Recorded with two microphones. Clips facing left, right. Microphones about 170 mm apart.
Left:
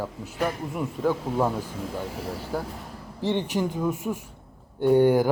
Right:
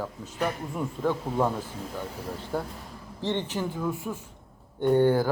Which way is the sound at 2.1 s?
90° left.